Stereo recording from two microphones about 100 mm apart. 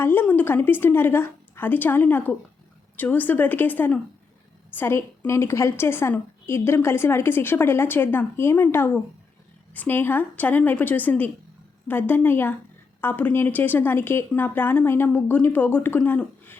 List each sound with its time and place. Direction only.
0.0 s a woman's voice: 20° left (ahead or behind)